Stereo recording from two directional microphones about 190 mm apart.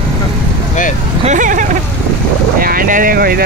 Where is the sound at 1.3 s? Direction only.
45° right (ahead or behind).